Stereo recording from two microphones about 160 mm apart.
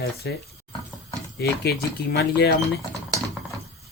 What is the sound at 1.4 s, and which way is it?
Speech, 80° left.